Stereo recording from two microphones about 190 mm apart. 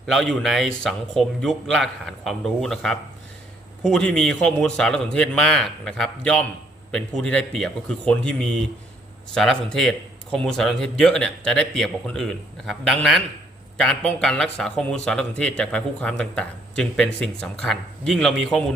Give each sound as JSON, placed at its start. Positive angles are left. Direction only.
{"t": 0.0, "sound": "speech", "side_deg": 0}